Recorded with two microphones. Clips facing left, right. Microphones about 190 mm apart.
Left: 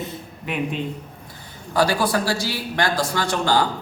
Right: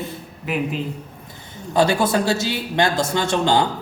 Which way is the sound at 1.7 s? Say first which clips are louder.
Right 2 dB; 25° right (ahead or behind).